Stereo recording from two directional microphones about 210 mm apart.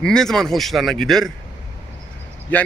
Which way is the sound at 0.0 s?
5° left (ahead or behind).